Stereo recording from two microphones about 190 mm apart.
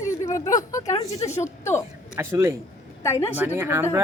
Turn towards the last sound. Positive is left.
turn(degrees=-10)  # may be behind; listen again after turning